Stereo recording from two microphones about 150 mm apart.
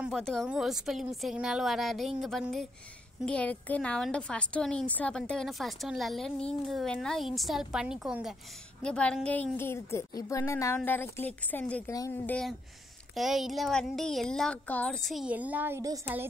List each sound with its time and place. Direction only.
0.1 s a woman's voice: 5° left (ahead or behind)
8.8 s a woman's voice: 5° left (ahead or behind)
11.9 s speech: 25° left (ahead or behind)
12.3 s speech: 5° left (ahead or behind); by 16.0 s 20° right (ahead or behind)